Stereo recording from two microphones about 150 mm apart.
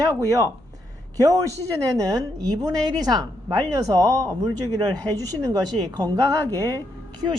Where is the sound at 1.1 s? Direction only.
25° right (ahead or behind).